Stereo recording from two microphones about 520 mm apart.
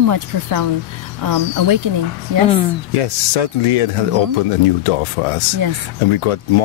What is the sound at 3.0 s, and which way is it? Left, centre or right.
Speech, left.